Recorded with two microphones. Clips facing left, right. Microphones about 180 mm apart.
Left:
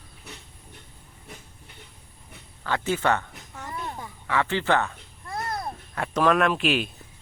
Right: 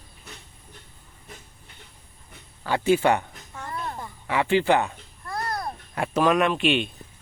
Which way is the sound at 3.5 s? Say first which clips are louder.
Right 2 dB; 5° left (ahead or behind).